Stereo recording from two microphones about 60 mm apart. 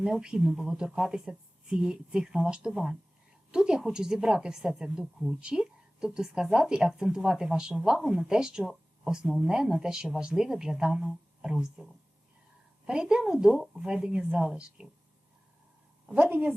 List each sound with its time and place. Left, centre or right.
0.0 s a woman's voice: centre
16.1 s a woman's voice: right